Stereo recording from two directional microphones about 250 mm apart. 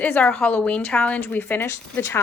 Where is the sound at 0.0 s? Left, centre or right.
Centre.